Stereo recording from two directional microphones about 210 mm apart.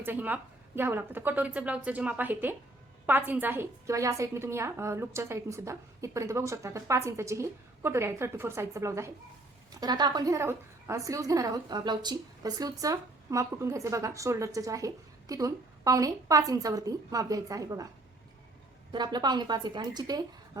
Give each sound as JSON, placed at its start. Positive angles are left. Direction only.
{"t": 0.0, "sound": "a woman's voice", "side_deg": -10}
{"t": 18.9, "sound": "a woman's voice", "side_deg": -20}